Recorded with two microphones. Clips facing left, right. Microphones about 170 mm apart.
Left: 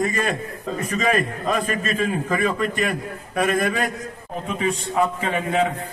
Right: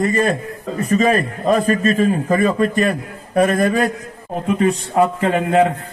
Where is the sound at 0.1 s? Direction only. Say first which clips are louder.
Right 6 dB; 40° right (ahead or behind).